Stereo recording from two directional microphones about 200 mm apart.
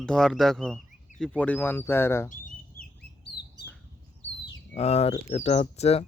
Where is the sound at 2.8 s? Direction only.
45° left (ahead or behind).